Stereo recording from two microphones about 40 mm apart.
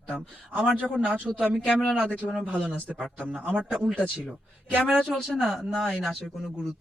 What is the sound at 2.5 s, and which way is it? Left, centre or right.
A man's voice, left.